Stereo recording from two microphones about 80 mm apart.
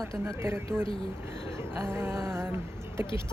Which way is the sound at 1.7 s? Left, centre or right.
Right.